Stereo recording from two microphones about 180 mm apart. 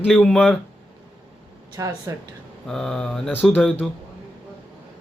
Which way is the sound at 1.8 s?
20° right (ahead or behind).